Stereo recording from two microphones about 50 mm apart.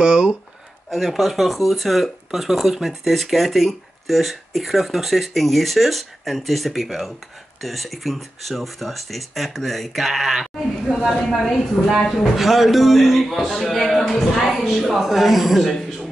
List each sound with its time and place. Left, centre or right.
0.0 s a sound: centre
0.8 s speech: centre
10.4 s sheep: centre
11.2 s speech: centre
13.3 s a woman's voice: centre